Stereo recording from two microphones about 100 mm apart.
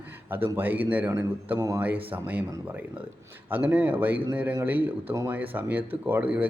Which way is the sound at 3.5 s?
15° right (ahead or behind).